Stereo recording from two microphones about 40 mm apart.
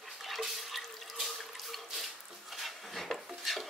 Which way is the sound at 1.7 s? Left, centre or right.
Centre.